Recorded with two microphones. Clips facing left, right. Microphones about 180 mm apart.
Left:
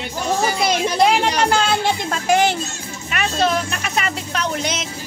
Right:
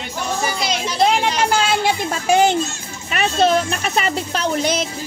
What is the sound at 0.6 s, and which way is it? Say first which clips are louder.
Speech: left 4 dB; 55° left (ahead or behind).